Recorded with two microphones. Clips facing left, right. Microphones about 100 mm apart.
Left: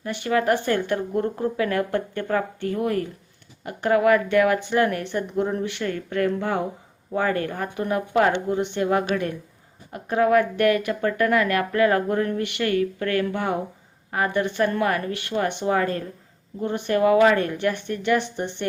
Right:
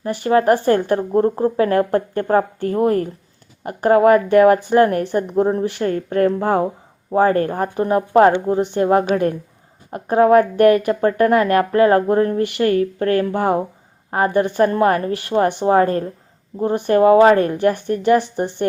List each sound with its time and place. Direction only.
0.0 s speech: 35° right (ahead or behind)